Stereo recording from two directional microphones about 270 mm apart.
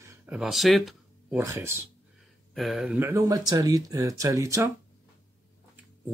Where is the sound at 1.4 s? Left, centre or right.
Centre.